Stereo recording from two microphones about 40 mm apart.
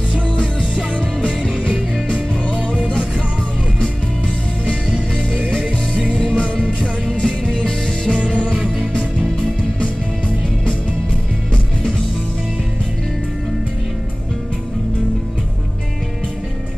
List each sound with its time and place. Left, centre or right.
0.1 s music: left
4.8 s music: right
5.5 s music: left